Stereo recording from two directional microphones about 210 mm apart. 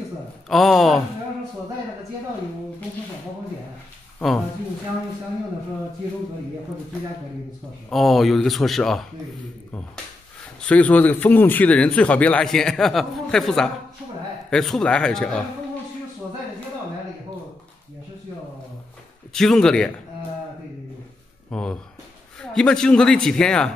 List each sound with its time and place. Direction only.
0.5 s a man's voice: centre (ahead or behind)
7.9 s a man's voice: centre (ahead or behind)
10.6 s a man's voice: 5° left (ahead or behind)
19.3 s a man's voice: centre (ahead or behind)
21.5 s a sound: 5° left (ahead or behind)
22.4 s a man's voice: 5° left (ahead or behind)